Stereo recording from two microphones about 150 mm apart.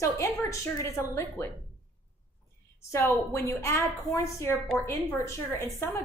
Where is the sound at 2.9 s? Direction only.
15° left (ahead or behind).